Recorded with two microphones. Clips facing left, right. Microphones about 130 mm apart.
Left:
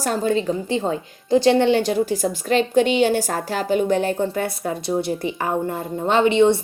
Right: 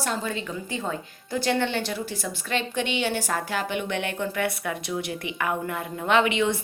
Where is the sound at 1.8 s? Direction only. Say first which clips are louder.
Left 10 dB; 45° left (ahead or behind).